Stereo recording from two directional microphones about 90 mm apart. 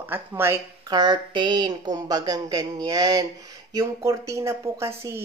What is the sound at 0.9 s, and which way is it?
A woman's voice, 55° right (ahead or behind).